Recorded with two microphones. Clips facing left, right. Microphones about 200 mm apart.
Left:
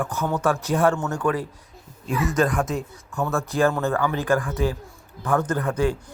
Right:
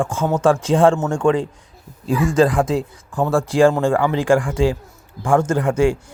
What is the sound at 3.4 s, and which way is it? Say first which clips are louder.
Speech: right 7 dB; 90° right.